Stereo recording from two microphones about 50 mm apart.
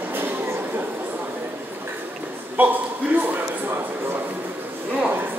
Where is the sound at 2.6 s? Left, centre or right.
Right.